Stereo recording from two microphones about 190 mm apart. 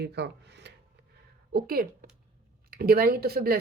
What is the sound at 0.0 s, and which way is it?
A woman's voice, 60° right (ahead or behind).